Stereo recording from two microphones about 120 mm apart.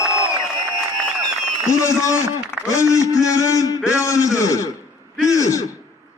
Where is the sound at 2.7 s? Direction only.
25° left (ahead or behind).